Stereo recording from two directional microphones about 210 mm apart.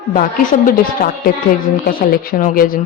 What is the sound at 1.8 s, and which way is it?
Speech, 40° left (ahead or behind).